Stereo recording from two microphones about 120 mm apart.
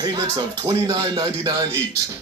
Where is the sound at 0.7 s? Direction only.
35° right (ahead or behind).